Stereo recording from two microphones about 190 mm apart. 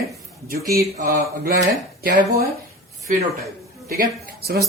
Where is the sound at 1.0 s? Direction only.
60° right (ahead or behind).